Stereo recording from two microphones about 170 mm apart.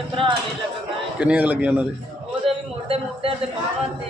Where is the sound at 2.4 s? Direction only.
35° right (ahead or behind).